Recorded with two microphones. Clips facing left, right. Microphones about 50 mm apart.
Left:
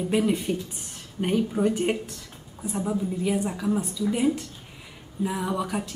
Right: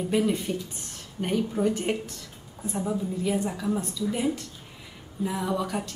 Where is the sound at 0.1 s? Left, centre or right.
Centre.